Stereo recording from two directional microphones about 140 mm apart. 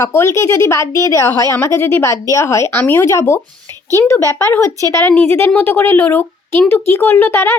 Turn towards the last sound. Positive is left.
turn(degrees=15)  # may be behind; listen again after turning